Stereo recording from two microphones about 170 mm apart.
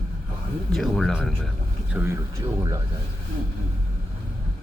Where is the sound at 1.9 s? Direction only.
10° right (ahead or behind).